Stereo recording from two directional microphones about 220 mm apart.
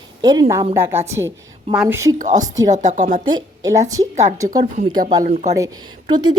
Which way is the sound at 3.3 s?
15° right (ahead or behind).